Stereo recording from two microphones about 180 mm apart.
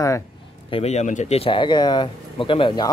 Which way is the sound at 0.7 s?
35° left (ahead or behind).